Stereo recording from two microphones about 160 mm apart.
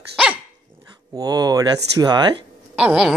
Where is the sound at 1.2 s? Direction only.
25° right (ahead or behind).